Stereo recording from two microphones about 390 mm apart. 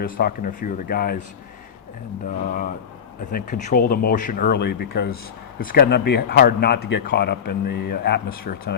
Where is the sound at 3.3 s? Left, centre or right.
Left.